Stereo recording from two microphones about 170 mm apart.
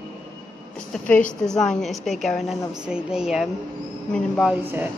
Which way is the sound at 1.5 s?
5° left (ahead or behind).